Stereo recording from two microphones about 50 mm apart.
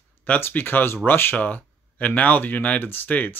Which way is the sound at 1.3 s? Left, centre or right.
Left.